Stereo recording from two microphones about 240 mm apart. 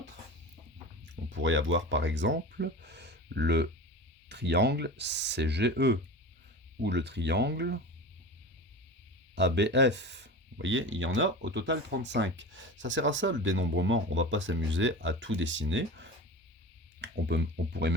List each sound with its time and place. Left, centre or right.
1.0 s speech: right
9.3 s speech: right